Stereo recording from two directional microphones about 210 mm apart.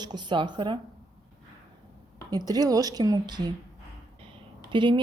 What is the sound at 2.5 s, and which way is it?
Speech, 20° right (ahead or behind).